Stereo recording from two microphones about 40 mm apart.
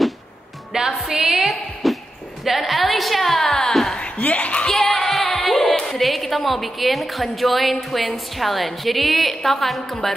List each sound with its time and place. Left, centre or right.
0.7 s music: centre
1.4 s a woman's voice: centre
4.0 s speech: left
4.6 s speech: centre